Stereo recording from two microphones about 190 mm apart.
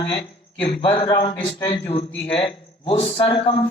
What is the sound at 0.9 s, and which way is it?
Speech, 25° left (ahead or behind).